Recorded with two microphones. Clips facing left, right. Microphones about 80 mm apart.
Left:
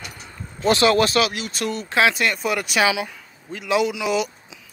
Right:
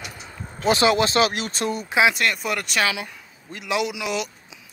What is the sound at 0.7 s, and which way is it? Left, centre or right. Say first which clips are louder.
Speech: left 2 dB; centre.